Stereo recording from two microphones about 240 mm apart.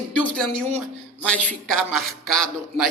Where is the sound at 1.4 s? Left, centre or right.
Right.